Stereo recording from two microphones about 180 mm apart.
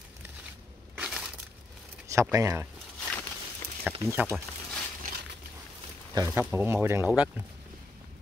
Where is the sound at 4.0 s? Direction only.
15° right (ahead or behind).